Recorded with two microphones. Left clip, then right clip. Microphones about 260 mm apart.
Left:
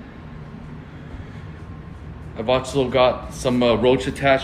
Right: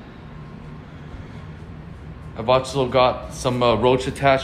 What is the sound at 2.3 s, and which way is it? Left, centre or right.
Speech, right.